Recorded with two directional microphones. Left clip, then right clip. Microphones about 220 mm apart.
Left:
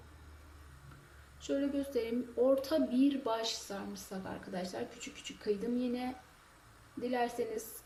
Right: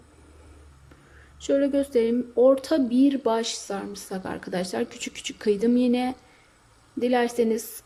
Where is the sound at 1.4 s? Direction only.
35° right (ahead or behind).